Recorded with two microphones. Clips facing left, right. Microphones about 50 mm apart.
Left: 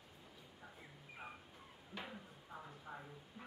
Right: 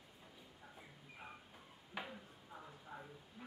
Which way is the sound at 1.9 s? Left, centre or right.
Centre.